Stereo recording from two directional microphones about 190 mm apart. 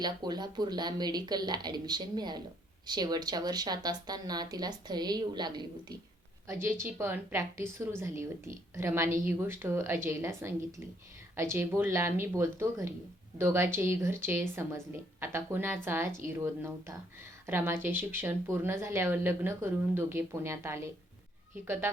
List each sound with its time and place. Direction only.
0.0 s a woman's voice: 20° right (ahead or behind)
6.5 s a woman's voice: 15° right (ahead or behind)